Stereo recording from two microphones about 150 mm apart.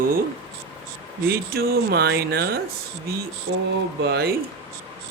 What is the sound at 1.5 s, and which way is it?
Speech, 90° right.